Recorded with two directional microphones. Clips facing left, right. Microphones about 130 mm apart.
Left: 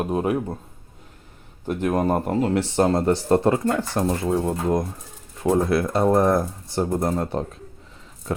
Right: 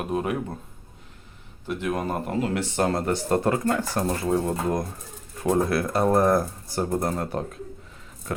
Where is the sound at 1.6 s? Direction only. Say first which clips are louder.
Left 5 dB; 45° left (ahead or behind); by 4.3 s 20° left (ahead or behind).